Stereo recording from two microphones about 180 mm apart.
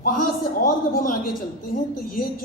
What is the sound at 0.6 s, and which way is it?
Speech, 50° left (ahead or behind).